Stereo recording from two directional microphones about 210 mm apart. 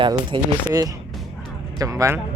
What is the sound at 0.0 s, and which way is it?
Speech, 20° right (ahead or behind).